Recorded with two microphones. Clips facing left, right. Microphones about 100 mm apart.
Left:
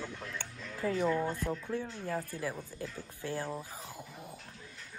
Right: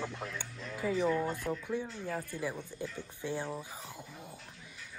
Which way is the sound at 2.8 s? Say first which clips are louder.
Right 2 dB; 20° right (ahead or behind).